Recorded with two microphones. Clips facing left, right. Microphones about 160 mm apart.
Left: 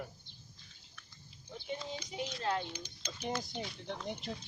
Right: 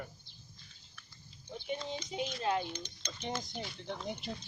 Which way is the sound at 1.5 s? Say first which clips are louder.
Right 2 dB; 20° right (ahead or behind).